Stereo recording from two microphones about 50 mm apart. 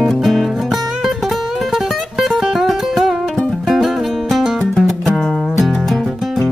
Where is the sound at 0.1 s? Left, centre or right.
Centre.